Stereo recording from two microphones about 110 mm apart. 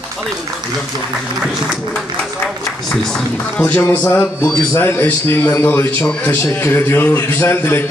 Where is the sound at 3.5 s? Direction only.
15° left (ahead or behind).